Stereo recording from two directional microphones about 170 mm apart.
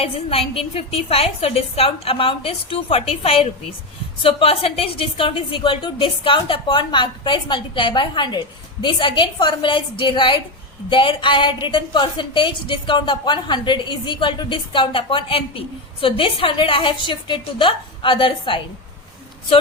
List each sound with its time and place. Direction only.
0.0 s a woman's voice: 35° left (ahead or behind)